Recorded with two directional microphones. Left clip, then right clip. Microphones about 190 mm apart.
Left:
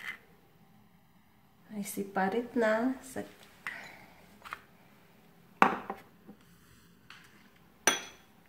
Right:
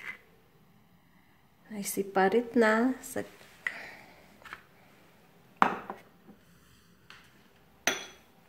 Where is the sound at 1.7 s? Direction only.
45° right (ahead or behind).